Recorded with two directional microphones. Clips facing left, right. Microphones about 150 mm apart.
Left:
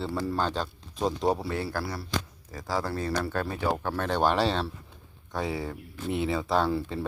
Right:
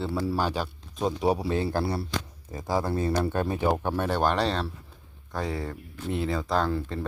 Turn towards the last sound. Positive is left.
turn(degrees=5)  # may be behind; listen again after turning